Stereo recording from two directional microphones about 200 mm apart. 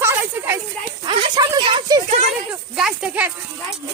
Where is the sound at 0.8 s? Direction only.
30° right (ahead or behind).